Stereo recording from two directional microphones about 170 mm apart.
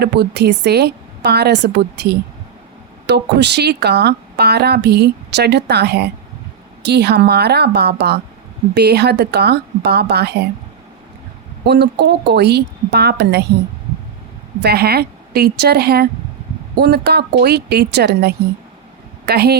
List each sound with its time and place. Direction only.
0.0 s speech: 75° right (ahead or behind)
11.6 s speech: 75° right (ahead or behind)
14.6 s speech: 70° right (ahead or behind)